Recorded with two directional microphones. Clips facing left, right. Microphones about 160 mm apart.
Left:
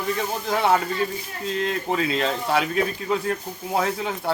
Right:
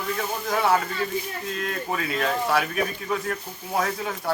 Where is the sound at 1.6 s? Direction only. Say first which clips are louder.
Left 5 dB; 25° left (ahead or behind).